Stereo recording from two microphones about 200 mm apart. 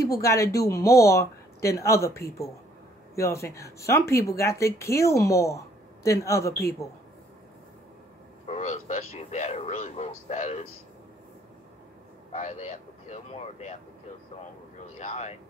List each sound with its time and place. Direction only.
0.0 s speech: 15° left (ahead or behind)
8.5 s speech: 35° left (ahead or behind)
12.3 s speech: 35° left (ahead or behind)
15.0 s speech: 35° left (ahead or behind)